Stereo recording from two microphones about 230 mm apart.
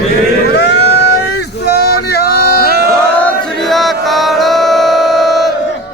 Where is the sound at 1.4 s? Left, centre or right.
Left.